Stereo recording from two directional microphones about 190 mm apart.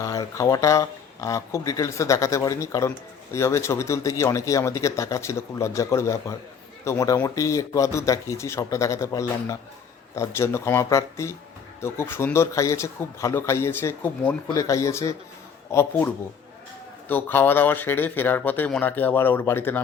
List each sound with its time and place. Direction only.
0.0 s a man's voice: 15° left (ahead or behind)
17.1 s a man's voice: 10° left (ahead or behind)